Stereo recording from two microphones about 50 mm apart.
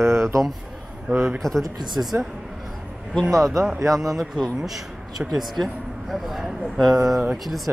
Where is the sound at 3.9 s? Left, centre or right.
Centre.